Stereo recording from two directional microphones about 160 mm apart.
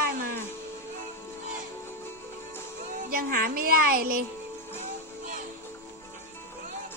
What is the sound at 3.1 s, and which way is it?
Speech, 65° right (ahead or behind).